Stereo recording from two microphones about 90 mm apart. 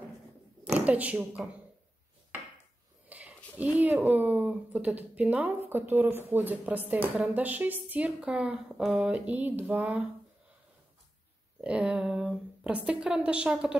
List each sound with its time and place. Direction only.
0.7 s speech: 15° right (ahead or behind)
2.3 s dishes: 20° right (ahead or behind)
3.1 s a sound: 15° right (ahead or behind)
3.5 s speech: 15° right (ahead or behind)
11.6 s speech: 10° right (ahead or behind)